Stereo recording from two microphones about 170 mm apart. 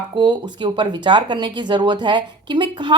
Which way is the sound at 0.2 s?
25° right (ahead or behind).